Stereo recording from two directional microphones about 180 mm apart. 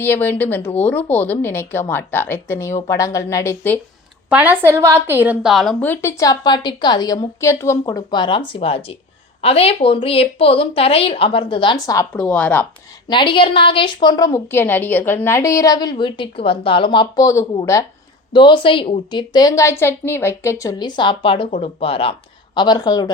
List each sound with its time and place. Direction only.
0.0 s a woman's voice: 10° left (ahead or behind)
4.3 s a woman's voice: 10° right (ahead or behind)
5.8 s a woman's voice: 10° left (ahead or behind)
12.1 s a woman's voice: 5° left (ahead or behind)
13.1 s a woman's voice: 25° left (ahead or behind)